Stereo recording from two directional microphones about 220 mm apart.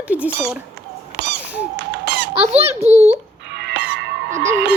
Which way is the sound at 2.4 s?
30° right (ahead or behind).